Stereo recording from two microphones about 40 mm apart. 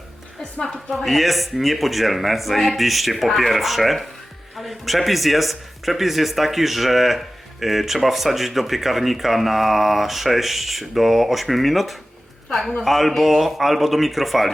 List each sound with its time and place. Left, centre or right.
0.6 s a woman's voice: centre
1.0 s a man's voice: centre